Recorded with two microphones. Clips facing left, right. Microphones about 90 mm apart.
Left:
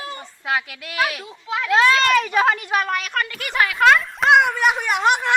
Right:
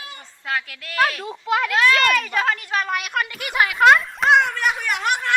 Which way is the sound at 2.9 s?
10° right (ahead or behind).